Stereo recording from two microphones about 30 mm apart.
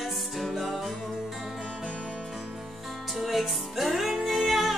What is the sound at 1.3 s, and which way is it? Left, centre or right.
Music, centre.